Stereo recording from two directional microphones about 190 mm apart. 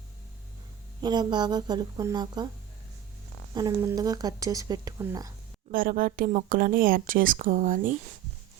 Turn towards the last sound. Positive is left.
turn(degrees=-45)  # may be behind; listen again after turning